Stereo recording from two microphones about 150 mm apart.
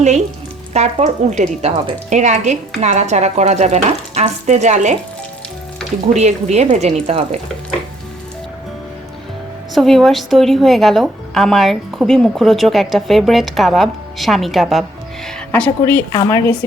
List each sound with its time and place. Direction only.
0.7 s a woman's voice: 45° right (ahead or behind)
6.1 s a woman's voice: 45° right (ahead or behind)
9.7 s a woman's voice: centre (ahead or behind)
16.0 s a woman's voice: 20° left (ahead or behind)